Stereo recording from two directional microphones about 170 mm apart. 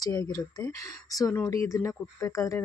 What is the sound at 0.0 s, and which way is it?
Speech, 20° left (ahead or behind).